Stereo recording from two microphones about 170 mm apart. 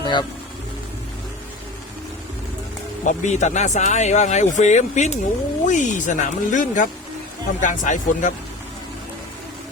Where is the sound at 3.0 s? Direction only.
45° left (ahead or behind).